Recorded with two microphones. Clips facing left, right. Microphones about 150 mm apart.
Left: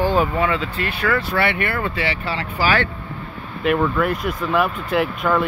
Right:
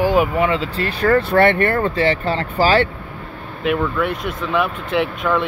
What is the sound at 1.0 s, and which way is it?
Speech, 45° right (ahead or behind).